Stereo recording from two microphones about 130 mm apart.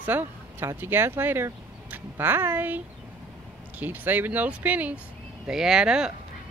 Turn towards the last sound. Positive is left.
turn(degrees=-5)  # may be behind; listen again after turning